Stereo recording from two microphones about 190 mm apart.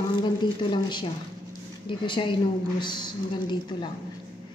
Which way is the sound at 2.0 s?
25° left (ahead or behind).